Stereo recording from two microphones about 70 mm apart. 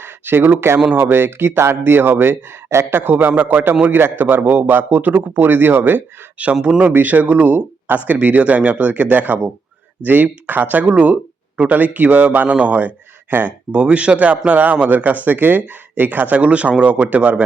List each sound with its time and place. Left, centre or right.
0.0 s speech: right
6.4 s speech: centre